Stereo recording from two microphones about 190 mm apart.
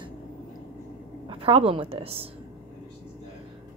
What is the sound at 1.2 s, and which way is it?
A woman's voice, 30° right (ahead or behind).